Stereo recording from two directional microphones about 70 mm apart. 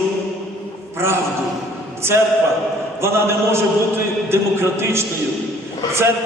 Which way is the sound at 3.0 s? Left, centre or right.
Right.